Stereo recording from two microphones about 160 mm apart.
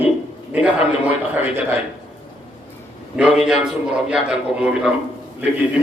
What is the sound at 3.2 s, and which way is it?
A man's voice, 5° right (ahead or behind).